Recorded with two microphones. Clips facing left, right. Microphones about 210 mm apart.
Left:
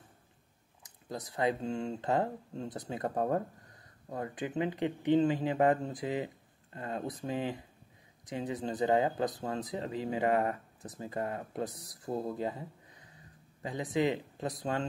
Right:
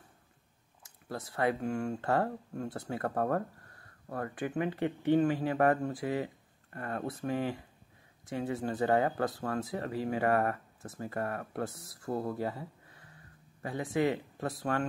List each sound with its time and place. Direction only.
0.8 s speech: 15° left (ahead or behind)